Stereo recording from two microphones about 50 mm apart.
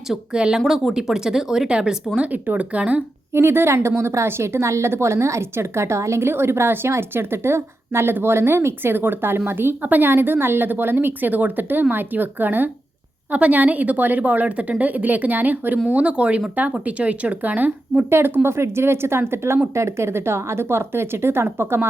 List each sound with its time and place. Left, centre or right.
0.3 s speech: centre
0.6 s speech: centre
0.9 s speech: centre
2.2 s speech: right
3.3 s a woman's voice: right
18.1 s a woman's voice: right